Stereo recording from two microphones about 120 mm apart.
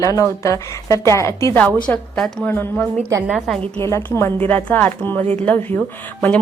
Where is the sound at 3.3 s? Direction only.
Centre (ahead or behind).